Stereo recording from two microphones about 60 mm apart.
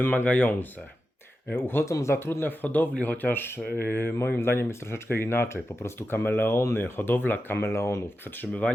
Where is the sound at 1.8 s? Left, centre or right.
Left.